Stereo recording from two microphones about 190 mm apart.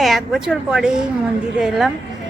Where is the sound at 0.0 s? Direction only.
Centre (ahead or behind).